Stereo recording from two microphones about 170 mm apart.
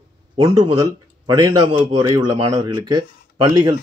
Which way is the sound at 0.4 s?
30° right (ahead or behind).